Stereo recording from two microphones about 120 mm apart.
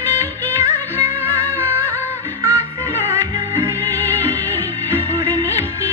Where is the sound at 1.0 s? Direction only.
20° right (ahead or behind).